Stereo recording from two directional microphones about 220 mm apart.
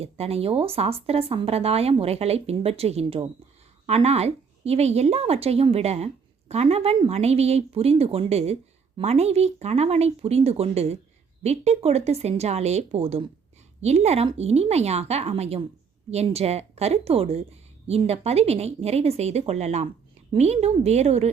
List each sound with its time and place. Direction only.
0.0 s a woman's voice: 25° right (ahead or behind)